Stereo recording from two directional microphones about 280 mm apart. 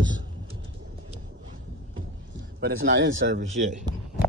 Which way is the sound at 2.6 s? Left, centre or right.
Right.